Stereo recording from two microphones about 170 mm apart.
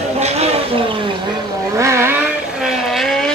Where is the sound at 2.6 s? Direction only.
Centre (ahead or behind).